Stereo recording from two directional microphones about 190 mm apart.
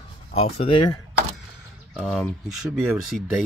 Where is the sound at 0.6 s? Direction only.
30° left (ahead or behind).